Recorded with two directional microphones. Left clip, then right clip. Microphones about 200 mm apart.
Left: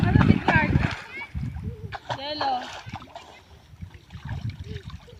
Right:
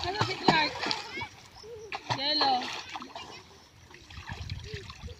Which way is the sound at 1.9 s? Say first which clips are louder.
Left 1 dB; 10° left (ahead or behind).